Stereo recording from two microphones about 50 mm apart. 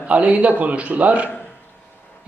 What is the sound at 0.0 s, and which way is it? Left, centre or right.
A man's voice, right.